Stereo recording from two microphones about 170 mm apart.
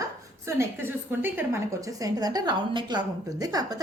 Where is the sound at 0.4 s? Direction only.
15° right (ahead or behind).